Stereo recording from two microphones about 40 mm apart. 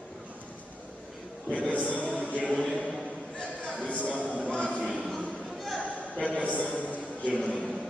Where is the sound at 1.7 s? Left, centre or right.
Left.